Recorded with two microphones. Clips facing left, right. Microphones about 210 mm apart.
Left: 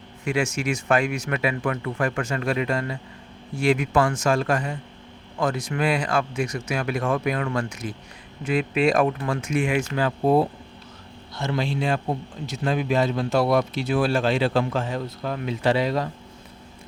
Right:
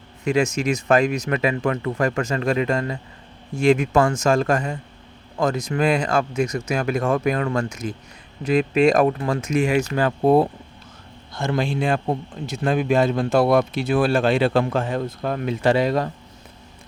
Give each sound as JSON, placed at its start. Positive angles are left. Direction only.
{"t": 0.3, "sound": "speech", "side_deg": -40}